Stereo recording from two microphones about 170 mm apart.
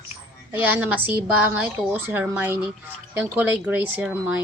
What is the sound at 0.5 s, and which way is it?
A woman's voice, 10° right (ahead or behind).